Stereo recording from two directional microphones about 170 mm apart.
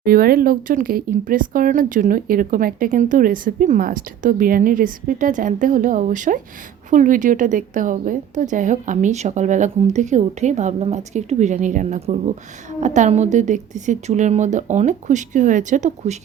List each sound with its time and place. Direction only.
0.0 s speech: 60° right (ahead or behind)